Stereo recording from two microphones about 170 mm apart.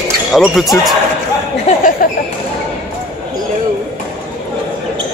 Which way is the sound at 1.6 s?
55° left (ahead or behind).